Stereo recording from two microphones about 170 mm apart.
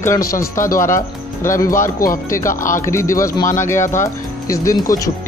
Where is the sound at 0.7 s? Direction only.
15° left (ahead or behind).